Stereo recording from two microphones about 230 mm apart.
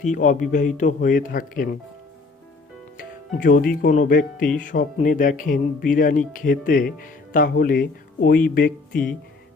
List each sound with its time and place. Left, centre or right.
0.0 s speech: left
3.0 s speech: left